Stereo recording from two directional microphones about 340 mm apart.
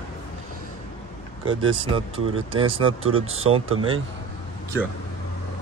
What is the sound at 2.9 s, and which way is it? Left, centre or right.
Speech, right.